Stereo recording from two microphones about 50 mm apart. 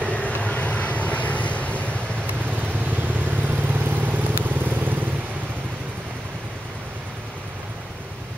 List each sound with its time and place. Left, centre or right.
0.0 s vehicle: left
2.6 s vehicle: right